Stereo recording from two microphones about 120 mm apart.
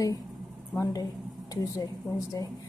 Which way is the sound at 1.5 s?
30° left (ahead or behind).